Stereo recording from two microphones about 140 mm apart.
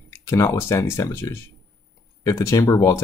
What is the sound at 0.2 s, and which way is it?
Speech, 20° left (ahead or behind).